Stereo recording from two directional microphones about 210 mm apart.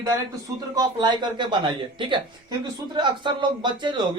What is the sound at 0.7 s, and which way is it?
Speech, 20° right (ahead or behind).